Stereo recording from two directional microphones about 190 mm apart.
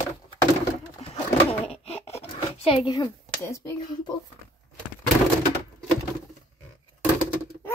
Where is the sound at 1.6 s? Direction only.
30° left (ahead or behind); by 3.7 s 15° left (ahead or behind).